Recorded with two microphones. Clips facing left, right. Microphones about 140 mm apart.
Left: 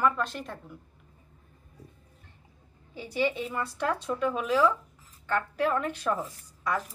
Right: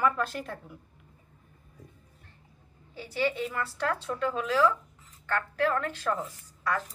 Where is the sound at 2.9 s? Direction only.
15° left (ahead or behind).